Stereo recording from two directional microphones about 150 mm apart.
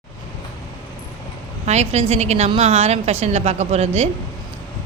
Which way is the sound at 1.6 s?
50° right (ahead or behind).